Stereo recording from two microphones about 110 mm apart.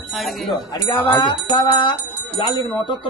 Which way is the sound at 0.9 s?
20° left (ahead or behind).